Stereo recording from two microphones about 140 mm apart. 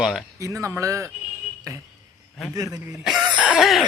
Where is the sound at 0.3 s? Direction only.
20° right (ahead or behind).